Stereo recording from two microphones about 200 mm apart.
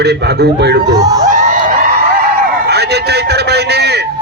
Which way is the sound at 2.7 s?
55° right (ahead or behind).